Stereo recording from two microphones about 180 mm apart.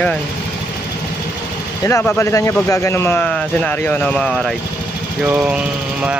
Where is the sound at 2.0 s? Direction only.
15° left (ahead or behind).